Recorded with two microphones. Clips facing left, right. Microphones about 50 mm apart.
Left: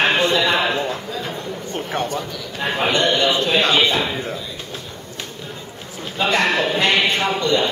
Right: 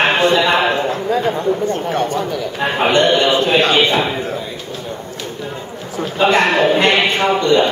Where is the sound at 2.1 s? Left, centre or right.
Right.